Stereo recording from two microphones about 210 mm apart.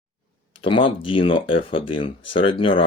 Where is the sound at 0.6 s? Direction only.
25° left (ahead or behind).